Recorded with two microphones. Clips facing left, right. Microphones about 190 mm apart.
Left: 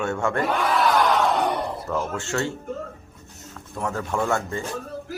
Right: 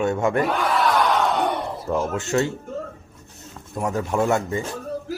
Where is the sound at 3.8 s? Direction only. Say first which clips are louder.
Right 4 dB; 15° right (ahead or behind).